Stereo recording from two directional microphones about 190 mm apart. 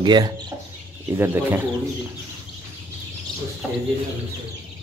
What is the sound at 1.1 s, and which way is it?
Speech, 10° right (ahead or behind).